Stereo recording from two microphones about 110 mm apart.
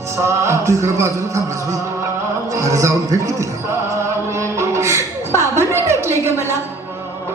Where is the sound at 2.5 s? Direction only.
30° right (ahead or behind).